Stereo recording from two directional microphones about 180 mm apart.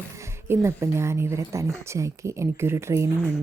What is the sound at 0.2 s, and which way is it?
Speech, 15° right (ahead or behind).